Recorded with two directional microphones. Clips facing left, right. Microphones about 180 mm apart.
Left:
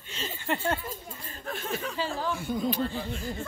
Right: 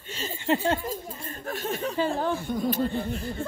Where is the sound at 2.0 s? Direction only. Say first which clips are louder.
Right 7 dB; 55° right (ahead or behind).